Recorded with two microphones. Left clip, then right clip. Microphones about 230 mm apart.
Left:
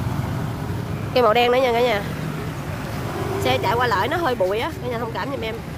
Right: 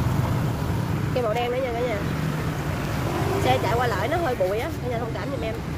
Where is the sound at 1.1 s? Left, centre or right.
Left.